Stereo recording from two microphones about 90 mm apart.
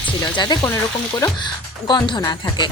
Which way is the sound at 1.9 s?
55° left (ahead or behind).